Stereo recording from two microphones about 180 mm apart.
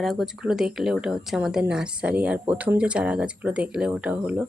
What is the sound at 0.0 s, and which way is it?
Speech, centre (ahead or behind).